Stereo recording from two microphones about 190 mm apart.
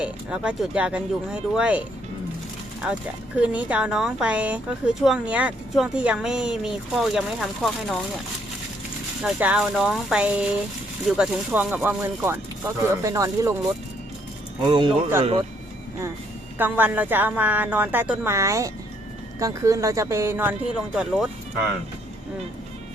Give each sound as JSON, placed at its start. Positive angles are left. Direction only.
{"t": 0.0, "sound": "speech", "side_deg": -5}
{"t": 2.8, "sound": "speech", "side_deg": -5}
{"t": 9.2, "sound": "speech", "side_deg": -5}
{"t": 14.7, "sound": "speech", "side_deg": -25}
{"t": 16.6, "sound": "speech", "side_deg": -10}